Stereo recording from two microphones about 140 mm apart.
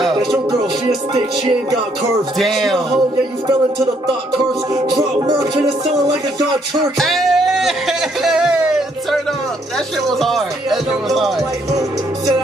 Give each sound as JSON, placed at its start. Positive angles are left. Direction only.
{"t": 2.3, "sound": "speech", "side_deg": 0}
{"t": 4.8, "sound": "music", "side_deg": -30}
{"t": 7.0, "sound": "speech", "side_deg": 0}